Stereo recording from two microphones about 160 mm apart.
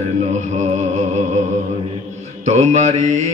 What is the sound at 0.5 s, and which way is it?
Mantra, 45° right (ahead or behind).